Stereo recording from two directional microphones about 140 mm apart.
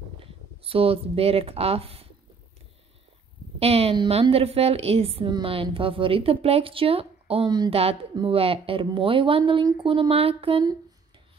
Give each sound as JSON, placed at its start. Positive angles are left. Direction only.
{"t": 0.2, "sound": "speech", "side_deg": -40}
{"t": 3.5, "sound": "a woman's voice", "side_deg": -45}
{"t": 7.4, "sound": "speech", "side_deg": -30}
{"t": 7.7, "sound": "a woman's voice", "side_deg": -45}